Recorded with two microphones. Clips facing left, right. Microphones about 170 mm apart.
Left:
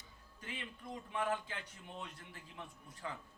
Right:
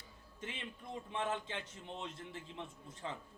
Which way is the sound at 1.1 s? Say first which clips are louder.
Left 1 dB; 25° right (ahead or behind).